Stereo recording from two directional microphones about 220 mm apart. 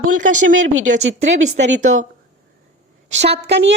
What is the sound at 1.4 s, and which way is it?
Speech, 35° right (ahead or behind).